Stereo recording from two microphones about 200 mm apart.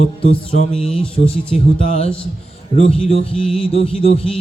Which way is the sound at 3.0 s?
30° left (ahead or behind).